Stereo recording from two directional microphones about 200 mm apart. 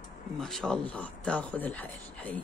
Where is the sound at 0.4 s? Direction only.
Centre (ahead or behind).